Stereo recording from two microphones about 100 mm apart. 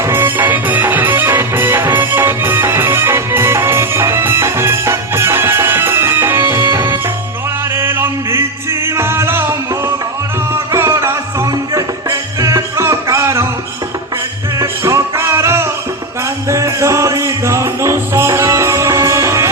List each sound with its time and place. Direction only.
0.0 s music: 25° right (ahead or behind)
14.6 s music: 30° right (ahead or behind)